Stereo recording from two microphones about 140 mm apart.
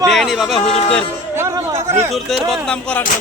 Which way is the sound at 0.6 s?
45° left (ahead or behind).